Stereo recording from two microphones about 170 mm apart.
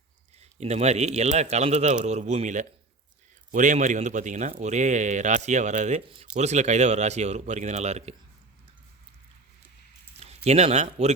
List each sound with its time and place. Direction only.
0.3 s a man's voice: 40° right (ahead or behind)
10.2 s speech: 40° right (ahead or behind)